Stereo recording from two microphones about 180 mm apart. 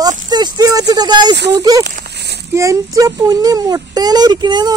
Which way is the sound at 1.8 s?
65° right (ahead or behind).